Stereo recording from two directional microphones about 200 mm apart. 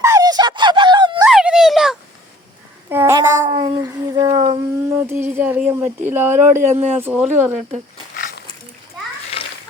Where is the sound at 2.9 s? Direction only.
15° right (ahead or behind).